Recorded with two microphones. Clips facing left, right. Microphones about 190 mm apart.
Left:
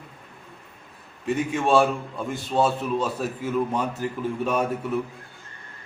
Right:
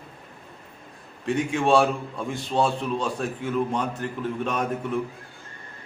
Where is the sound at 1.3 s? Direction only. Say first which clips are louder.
Right 1 dB; centre (ahead or behind).